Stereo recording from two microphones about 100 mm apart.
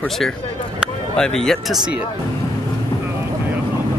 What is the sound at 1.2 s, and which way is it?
Speech, 5° left (ahead or behind).